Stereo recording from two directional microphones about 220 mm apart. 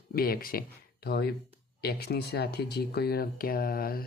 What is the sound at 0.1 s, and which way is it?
Speech, 45° left (ahead or behind).